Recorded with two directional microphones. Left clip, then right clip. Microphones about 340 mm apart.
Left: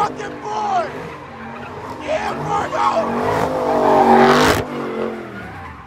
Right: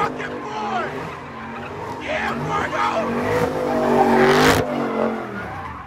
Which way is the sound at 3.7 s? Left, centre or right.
Centre.